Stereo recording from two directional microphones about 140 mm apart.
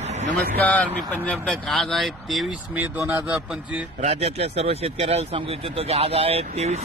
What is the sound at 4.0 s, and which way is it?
Speech, 50° right (ahead or behind).